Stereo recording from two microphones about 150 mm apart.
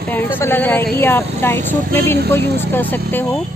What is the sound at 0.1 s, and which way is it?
Speech, 15° left (ahead or behind).